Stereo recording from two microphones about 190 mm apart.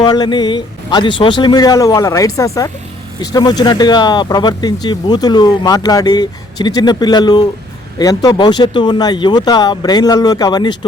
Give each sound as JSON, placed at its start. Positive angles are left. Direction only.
{"t": 0.0, "sound": "speech", "side_deg": 20}